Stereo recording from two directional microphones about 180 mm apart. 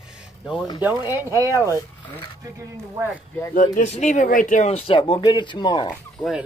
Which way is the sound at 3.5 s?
45° left (ahead or behind).